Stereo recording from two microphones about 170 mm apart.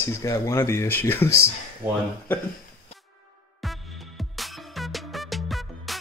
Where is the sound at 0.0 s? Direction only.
15° left (ahead or behind).